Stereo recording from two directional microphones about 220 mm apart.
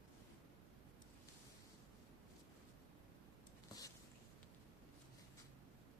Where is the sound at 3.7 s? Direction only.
15° left (ahead or behind).